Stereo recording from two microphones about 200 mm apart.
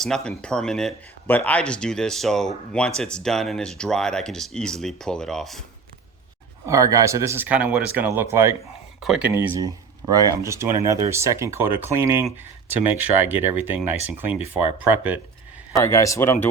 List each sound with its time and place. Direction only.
0.0 s speech: 5° left (ahead or behind)
6.7 s speech: 15° right (ahead or behind)
9.4 s speech: 20° right (ahead or behind)
15.8 s a man's voice: 15° left (ahead or behind)